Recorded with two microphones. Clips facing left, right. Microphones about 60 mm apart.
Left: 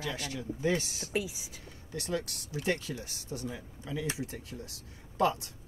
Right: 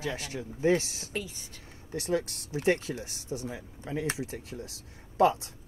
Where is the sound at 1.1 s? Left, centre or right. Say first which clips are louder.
Left 3 dB; centre.